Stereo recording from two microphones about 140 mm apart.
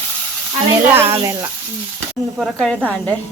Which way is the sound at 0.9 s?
15° right (ahead or behind).